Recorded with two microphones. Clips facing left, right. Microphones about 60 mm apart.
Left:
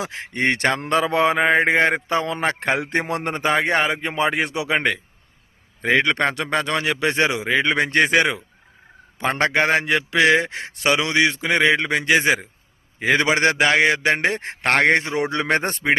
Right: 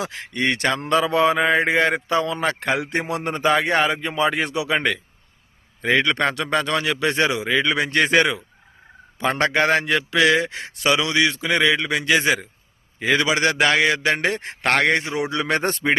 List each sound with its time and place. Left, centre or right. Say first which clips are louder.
0.0 s a man's voice: even; left
0.4 s mantra: left 1 dB; left
3.1 s a man's voice: right 4 dB; left
7.8 s mantra: left 2 dB; left
8.0 s a man's voice: even; left
9.6 s a man's voice: even; centre
13.1 s mantra: left 1 dB; left
13.7 s a man's voice: left 1 dB; left
14.7 s mantra: left 2 dB; left
15.6 s a man's voice: even; centre